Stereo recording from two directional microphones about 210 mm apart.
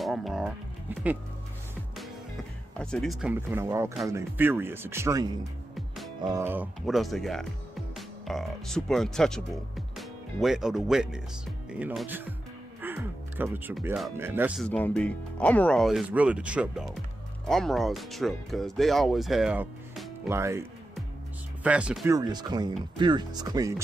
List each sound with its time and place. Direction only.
0.0 s speech: centre (ahead or behind)
2.8 s speech: 5° left (ahead or behind)
14.1 s speech: 10° right (ahead or behind)
14.6 s speech: 5° left (ahead or behind); by 20.6 s 10° right (ahead or behind)
21.6 s speech: 5° right (ahead or behind)